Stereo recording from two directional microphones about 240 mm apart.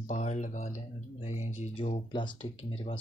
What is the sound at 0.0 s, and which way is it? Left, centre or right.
Speech, left.